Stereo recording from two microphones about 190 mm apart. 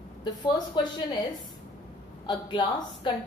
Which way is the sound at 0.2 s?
25° left (ahead or behind).